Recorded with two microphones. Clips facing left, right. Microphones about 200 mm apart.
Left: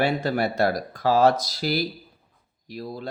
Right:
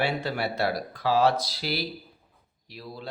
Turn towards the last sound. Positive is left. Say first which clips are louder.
# left 7 dB
turn(degrees=45)  # may be behind; listen again after turning